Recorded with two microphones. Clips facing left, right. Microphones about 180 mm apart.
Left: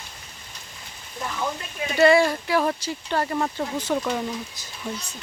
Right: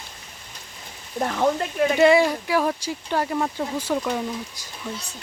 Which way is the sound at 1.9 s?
15° right (ahead or behind).